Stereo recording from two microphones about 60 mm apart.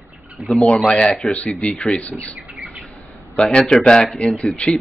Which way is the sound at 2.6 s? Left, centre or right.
Right.